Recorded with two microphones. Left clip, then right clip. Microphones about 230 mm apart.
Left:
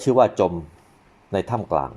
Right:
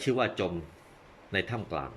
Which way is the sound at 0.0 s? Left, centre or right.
Left.